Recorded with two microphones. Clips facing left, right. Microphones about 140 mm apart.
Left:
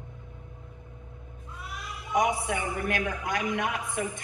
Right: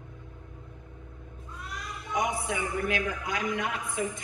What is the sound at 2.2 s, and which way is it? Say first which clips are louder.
A woman's voice: left 1 dB; 55° left (ahead or behind).